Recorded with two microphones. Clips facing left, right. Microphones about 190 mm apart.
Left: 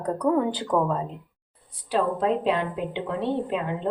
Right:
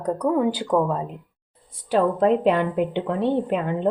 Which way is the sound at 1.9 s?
55° right (ahead or behind).